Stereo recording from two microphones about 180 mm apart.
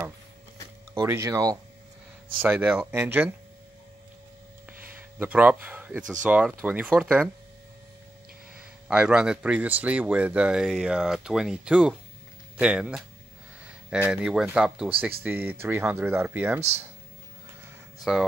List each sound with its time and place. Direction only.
1.0 s speech: 15° right (ahead or behind)
4.6 s a sound: 10° right (ahead or behind)
6.2 s speech: 5° right (ahead or behind)
8.5 s speech: 5° right (ahead or behind)
18.1 s speech: centre (ahead or behind)